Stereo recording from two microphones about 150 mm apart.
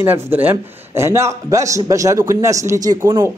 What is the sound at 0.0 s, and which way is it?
A man's voice, 15° right (ahead or behind).